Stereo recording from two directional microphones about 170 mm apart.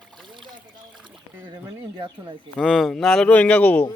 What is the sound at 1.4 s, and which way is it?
Speech, 25° right (ahead or behind).